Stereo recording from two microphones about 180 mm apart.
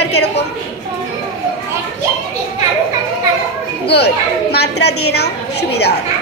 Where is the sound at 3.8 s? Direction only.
65° left (ahead or behind).